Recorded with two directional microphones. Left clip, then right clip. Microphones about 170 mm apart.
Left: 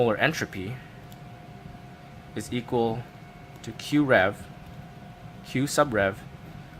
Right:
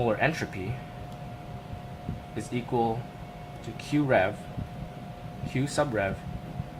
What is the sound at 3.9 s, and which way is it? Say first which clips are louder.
Speech: left 3 dB; 40° left (ahead or behind).